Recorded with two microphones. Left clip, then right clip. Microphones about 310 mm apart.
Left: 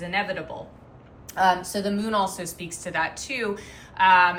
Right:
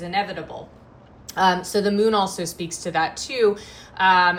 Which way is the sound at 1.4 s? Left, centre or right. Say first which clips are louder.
Right 2 dB; right.